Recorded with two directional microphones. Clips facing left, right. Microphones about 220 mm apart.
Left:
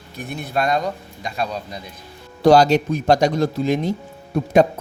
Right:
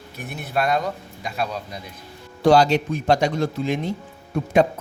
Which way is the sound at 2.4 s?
40° left (ahead or behind).